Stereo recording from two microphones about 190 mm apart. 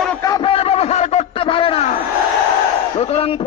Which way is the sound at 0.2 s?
25° left (ahead or behind).